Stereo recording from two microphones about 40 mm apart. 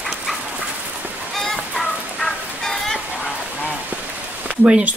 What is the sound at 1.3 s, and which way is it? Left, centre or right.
Fowl, centre.